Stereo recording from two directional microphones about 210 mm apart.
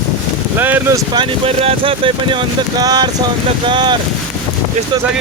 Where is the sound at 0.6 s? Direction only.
10° right (ahead or behind).